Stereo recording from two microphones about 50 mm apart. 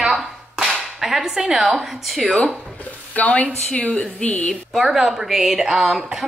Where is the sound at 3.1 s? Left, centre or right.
Left.